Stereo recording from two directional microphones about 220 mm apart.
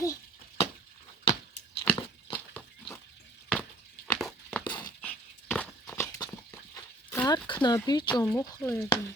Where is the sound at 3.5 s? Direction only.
5° left (ahead or behind).